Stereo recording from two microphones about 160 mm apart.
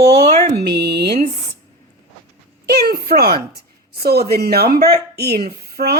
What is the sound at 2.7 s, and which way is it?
A woman's voice, 75° right (ahead or behind).